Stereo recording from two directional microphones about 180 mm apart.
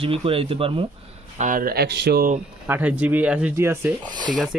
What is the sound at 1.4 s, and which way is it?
Speech, 50° right (ahead or behind).